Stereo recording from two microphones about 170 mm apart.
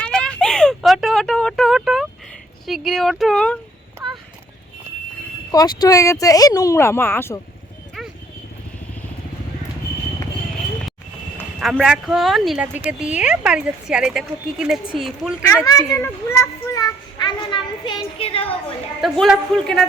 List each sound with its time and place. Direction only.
0.0 s a sound: 5° left (ahead or behind)
2.6 s speech: centre (ahead or behind)
5.5 s a child's voice: 20° left (ahead or behind)
11.6 s speech: centre (ahead or behind)
15.6 s a child's voice: 20° left (ahead or behind); by 18.5 s 35° left (ahead or behind)
19.0 s speech: centre (ahead or behind)